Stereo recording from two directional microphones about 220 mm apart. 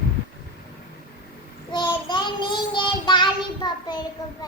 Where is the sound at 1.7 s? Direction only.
20° left (ahead or behind).